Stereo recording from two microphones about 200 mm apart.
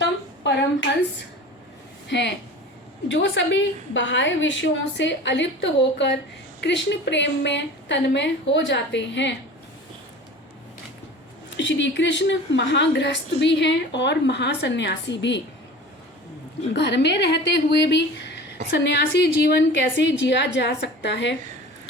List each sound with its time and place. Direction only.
0.0 s a sound: 65° left (ahead or behind)
2.0 s a woman's voice: 60° left (ahead or behind)
11.5 s a woman's voice: 65° left (ahead or behind)
16.7 s a woman's voice: 60° left (ahead or behind)